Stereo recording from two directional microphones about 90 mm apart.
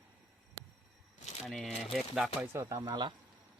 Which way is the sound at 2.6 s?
40° right (ahead or behind).